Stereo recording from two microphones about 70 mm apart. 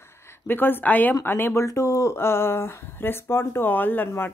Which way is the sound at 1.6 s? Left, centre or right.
Left.